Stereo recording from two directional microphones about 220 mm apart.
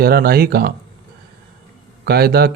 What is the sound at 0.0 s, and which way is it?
Speech, 45° right (ahead or behind).